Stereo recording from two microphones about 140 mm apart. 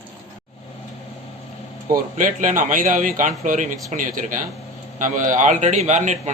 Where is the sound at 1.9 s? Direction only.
70° right (ahead or behind).